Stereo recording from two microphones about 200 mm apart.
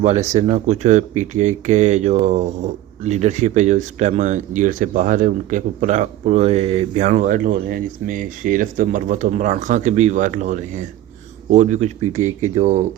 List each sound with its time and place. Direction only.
0.0 s speech: 35° right (ahead or behind)